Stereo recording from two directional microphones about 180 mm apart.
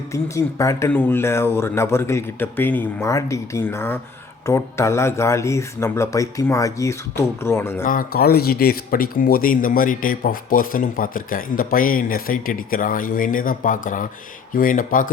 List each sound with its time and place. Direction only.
0.1 s speech: 15° left (ahead or behind)
7.9 s speech: 55° left (ahead or behind)